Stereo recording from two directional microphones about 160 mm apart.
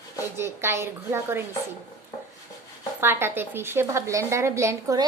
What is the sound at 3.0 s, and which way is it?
A woman's voice, 15° right (ahead or behind).